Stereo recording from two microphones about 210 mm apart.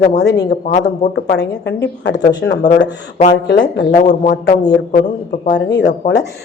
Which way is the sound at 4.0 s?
35° left (ahead or behind).